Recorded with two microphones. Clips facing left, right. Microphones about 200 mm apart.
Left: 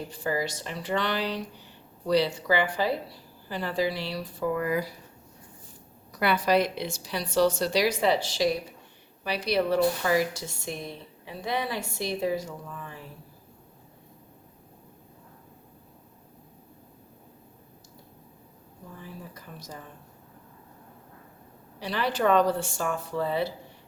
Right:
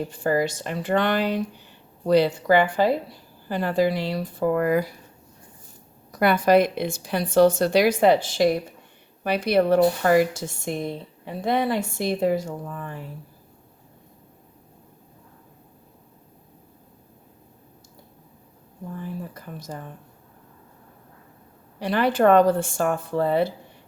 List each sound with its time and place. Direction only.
0.1 s speech: 50° right (ahead or behind)
6.1 s speech: 50° right (ahead or behind)
19.3 s speech: 55° right (ahead or behind)
21.8 s speech: 55° right (ahead or behind)